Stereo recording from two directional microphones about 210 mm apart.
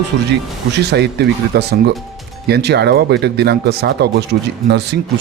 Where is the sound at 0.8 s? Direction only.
50° right (ahead or behind).